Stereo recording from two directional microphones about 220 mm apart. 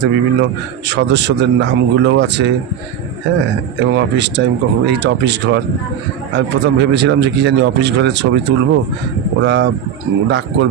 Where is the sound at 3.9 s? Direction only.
50° right (ahead or behind).